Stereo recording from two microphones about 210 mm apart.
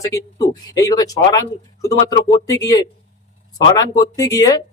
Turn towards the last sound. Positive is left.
turn(degrees=15)  # may be behind; listen again after turning